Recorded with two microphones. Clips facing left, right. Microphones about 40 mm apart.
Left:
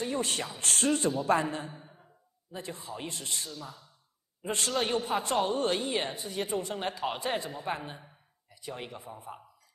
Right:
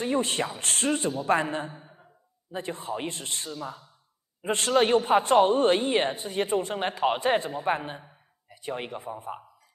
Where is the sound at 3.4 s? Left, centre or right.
Right.